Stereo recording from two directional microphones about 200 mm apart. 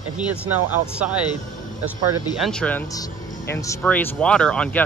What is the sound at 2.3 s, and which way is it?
Speech, centre (ahead or behind).